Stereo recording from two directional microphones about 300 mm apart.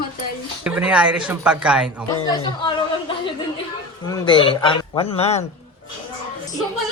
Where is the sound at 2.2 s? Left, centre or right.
Centre.